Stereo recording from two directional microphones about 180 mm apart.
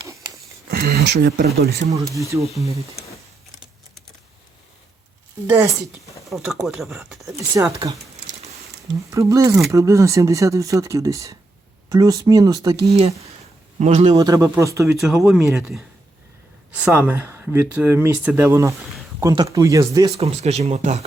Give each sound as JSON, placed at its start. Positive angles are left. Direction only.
{"t": 0.1, "sound": "a sound", "side_deg": -20}
{"t": 0.7, "sound": "speech", "side_deg": -60}
{"t": 1.9, "sound": "speech", "side_deg": -20}
{"t": 2.4, "sound": "speech", "side_deg": 0}
{"t": 5.5, "sound": "speech", "side_deg": -15}
{"t": 6.2, "sound": "speech", "side_deg": 0}
{"t": 7.2, "sound": "speech", "side_deg": -15}
{"t": 9.0, "sound": "speech", "side_deg": -15}
{"t": 12.9, "sound": "speech", "side_deg": -35}
{"t": 14.2, "sound": "speech", "side_deg": -20}
{"t": 14.9, "sound": "speech", "side_deg": 0}
{"t": 16.7, "sound": "speech", "side_deg": -10}
{"t": 20.1, "sound": "speech", "side_deg": -35}